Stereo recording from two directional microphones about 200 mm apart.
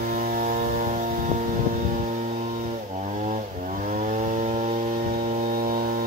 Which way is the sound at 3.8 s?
40° right (ahead or behind).